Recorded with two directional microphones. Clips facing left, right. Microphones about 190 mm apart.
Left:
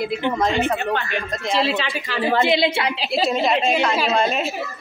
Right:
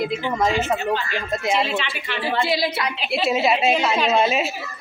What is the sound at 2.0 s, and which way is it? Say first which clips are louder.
Speech: left 4 dB; 40° left (ahead or behind).